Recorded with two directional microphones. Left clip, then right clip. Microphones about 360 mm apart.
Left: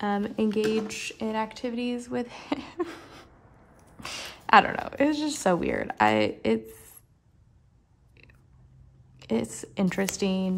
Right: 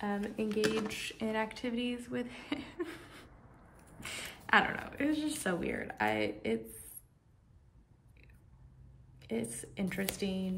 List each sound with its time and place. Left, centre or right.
0.0 s a woman's voice: centre
9.2 s a woman's voice: centre